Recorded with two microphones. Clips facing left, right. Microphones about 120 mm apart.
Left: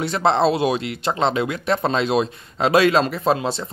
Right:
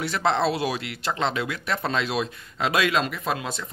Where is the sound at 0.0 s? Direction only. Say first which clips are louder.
Left 5 dB; 25° left (ahead or behind).